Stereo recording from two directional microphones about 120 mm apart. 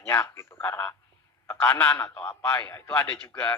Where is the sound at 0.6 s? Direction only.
15° left (ahead or behind).